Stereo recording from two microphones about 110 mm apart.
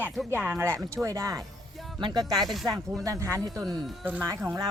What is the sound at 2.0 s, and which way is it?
A woman's voice, 40° right (ahead or behind).